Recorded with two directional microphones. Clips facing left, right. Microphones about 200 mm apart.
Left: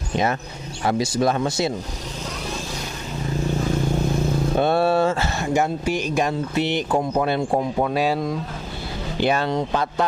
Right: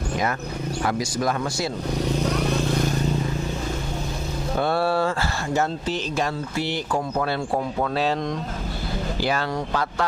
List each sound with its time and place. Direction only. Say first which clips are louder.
0.8 s speech: left 5 dB; 25° left (ahead or behind)
4.6 s speech: left 3 dB; 20° left (ahead or behind)
9.2 s speech: left 6 dB; 25° left (ahead or behind)